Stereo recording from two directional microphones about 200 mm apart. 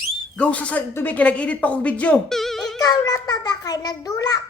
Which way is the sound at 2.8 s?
20° left (ahead or behind).